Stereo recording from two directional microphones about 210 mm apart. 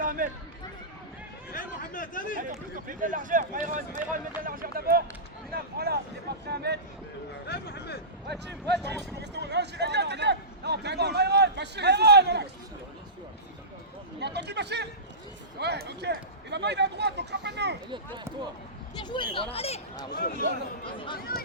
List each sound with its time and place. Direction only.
0.0 s run: 40° right (ahead or behind)
1.5 s chatter: 40° left (ahead or behind)
2.4 s speech: 40° right (ahead or behind)
7.4 s speech: 50° left (ahead or behind)
8.3 s speech: 55° right (ahead or behind)
14.2 s speech: 55° right (ahead or behind)
17.9 s speech: 20° right (ahead or behind)
19.0 s speech: 20° left (ahead or behind)
21.3 s speech: 45° left (ahead or behind)